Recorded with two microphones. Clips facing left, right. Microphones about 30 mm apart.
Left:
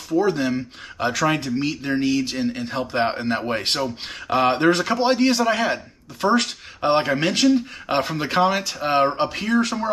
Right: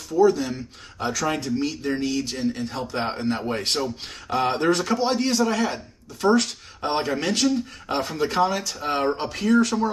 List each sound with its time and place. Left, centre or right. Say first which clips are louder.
0.1 s speech: right 1 dB; left